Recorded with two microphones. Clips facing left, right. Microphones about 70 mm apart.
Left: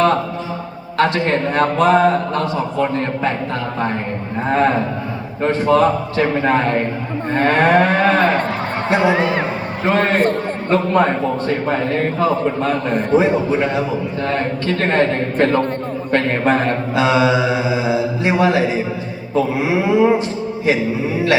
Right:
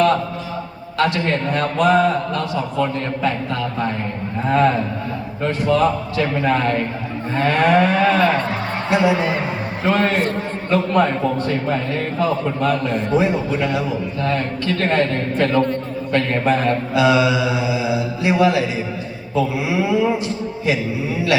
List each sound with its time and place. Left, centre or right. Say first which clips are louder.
0.9 s a man's voice: left 3 dB; left
7.3 s cattle: left 2 dB; left
8.9 s a man's voice: left 1 dB; left
9.8 s a man's voice: left 3 dB; left
10.9 s a man's voice: left 1 dB; left
12.9 s cattle: left 3 dB; left
13.1 s a man's voice: left 4 dB; left